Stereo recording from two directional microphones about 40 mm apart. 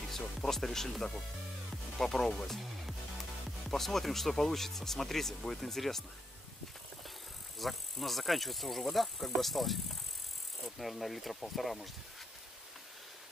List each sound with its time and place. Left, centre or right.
0.4 s speech: centre
3.7 s speech: centre
7.5 s speech: centre
10.8 s speech: centre